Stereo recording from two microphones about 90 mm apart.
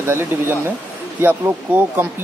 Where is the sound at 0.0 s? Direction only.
25° right (ahead or behind).